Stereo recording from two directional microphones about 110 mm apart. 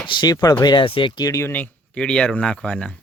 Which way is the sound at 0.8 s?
55° left (ahead or behind).